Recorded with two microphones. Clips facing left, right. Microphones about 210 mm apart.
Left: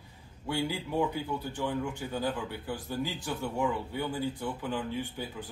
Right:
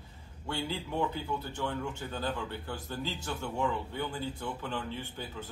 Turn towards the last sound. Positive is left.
turn(degrees=15)  # may be behind; listen again after turning